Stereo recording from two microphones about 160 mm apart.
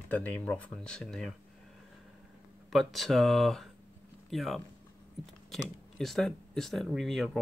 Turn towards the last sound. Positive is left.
turn(degrees=0)  # may be behind; listen again after turning